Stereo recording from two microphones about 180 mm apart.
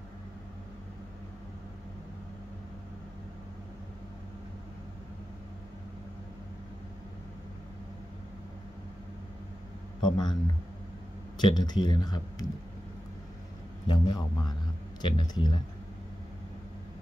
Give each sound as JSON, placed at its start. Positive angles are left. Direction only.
{"t": 10.0, "sound": "speech", "side_deg": 25}
{"t": 11.5, "sound": "speech", "side_deg": 25}
{"t": 13.8, "sound": "a man's voice", "side_deg": 25}